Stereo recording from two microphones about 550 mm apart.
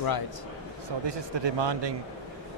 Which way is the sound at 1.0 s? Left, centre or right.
Right.